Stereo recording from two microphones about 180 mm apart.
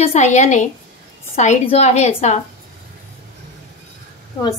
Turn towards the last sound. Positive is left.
turn(degrees=30)  # may be behind; listen again after turning